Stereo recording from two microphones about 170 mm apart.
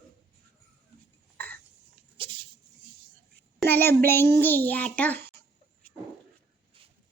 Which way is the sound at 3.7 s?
10° left (ahead or behind).